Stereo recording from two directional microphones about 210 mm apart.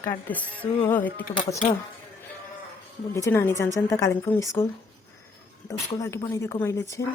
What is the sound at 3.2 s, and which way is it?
A woman's voice, 10° left (ahead or behind).